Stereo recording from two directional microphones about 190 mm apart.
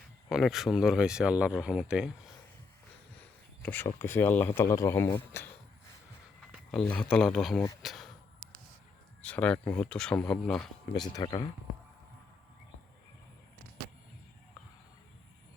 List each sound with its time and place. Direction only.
0.3 s speech: centre (ahead or behind)
3.6 s speech: 10° left (ahead or behind)
6.7 s speech: 5° left (ahead or behind)
7.8 s a sound: centre (ahead or behind)
9.2 s speech: 5° left (ahead or behind)
11.1 s speech: 25° left (ahead or behind)